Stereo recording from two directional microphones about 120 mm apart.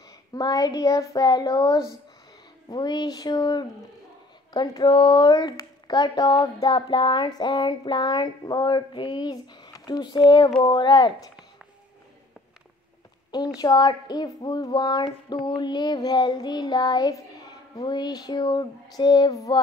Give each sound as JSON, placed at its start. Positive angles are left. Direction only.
{"t": 0.3, "sound": "speech", "side_deg": 30}
{"t": 13.6, "sound": "speech", "side_deg": 35}